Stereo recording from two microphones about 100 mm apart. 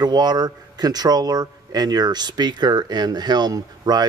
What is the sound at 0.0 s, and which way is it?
Speech, 45° right (ahead or behind).